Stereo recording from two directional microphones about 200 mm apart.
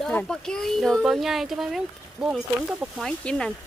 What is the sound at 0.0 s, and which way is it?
Speech, 5° left (ahead or behind).